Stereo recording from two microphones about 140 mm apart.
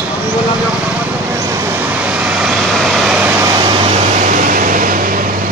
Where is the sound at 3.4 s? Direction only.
30° right (ahead or behind).